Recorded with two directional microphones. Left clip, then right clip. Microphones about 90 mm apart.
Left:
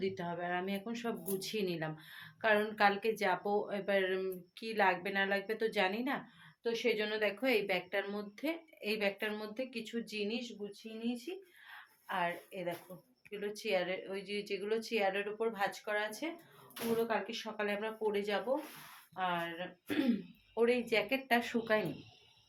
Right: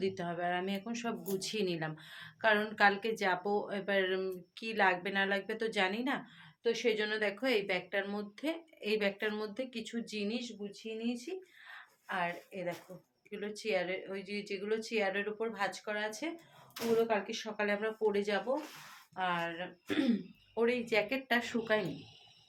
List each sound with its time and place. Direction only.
0.0 s speech: 25° right (ahead or behind)
7.4 s speech: centre (ahead or behind)
11.7 s a sound: centre (ahead or behind)
13.3 s a woman's voice: 15° left (ahead or behind)
13.6 s speech: 30° left (ahead or behind); by 16.3 s centre (ahead or behind)
17.1 s speech: 10° right (ahead or behind); by 21.8 s 5° left (ahead or behind)